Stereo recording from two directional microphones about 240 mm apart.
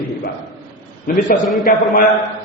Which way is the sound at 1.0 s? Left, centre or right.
Left.